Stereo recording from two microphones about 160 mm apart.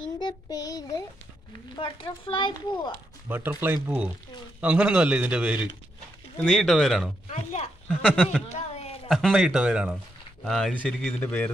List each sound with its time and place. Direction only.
0.2 s child singing: 25° left (ahead or behind)
1.8 s speech: 30° left (ahead or behind)
3.3 s a man's voice: 10° right (ahead or behind)
6.3 s speech: 5° left (ahead or behind)
7.2 s speech: 40° left (ahead or behind)
8.1 s speech: 5° right (ahead or behind)
8.5 s a sound: 40° left (ahead or behind)
9.1 s speech: centre (ahead or behind)